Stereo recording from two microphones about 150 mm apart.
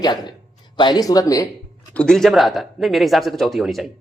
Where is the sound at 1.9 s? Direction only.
5° left (ahead or behind).